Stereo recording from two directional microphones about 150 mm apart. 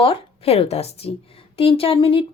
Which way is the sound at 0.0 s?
40° left (ahead or behind).